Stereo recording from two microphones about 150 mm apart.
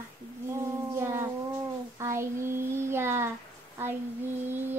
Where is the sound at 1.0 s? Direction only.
20° right (ahead or behind).